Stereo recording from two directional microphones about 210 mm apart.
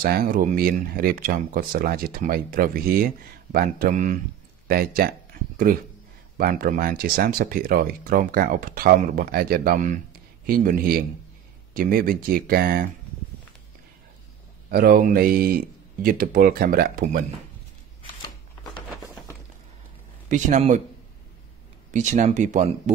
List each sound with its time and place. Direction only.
0.0 s speech: 45° right (ahead or behind)
14.7 s speech: 45° right (ahead or behind)
20.2 s speech: 35° right (ahead or behind)
21.9 s speech: 35° right (ahead or behind)